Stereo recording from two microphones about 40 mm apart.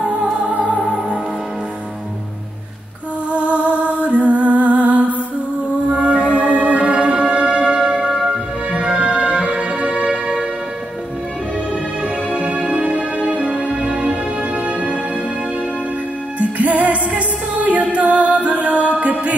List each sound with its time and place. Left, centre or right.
0.0 s music: right
0.8 s music: right
3.3 s music: right; by 8.4 s centre
8.7 s music: right
12.0 s music: right
16.3 s music: right